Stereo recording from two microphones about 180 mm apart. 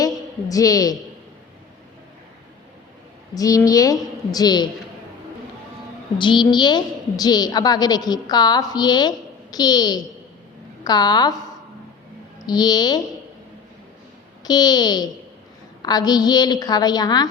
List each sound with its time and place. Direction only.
0.0 s a sound: 20° left (ahead or behind)
3.3 s a woman's voice: 20° left (ahead or behind)
6.1 s a woman's voice: 25° left (ahead or behind)
12.5 s a woman's voice: 20° left (ahead or behind)
14.4 s a woman's voice: 20° left (ahead or behind)